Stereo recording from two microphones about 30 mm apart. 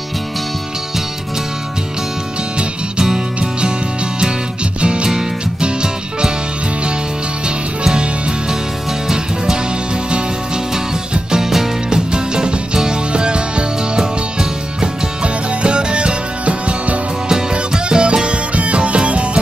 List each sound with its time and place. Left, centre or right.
4.8 s music: right
7.4 s music: right
11.3 s music: centre
11.9 s music: right
17.3 s music: right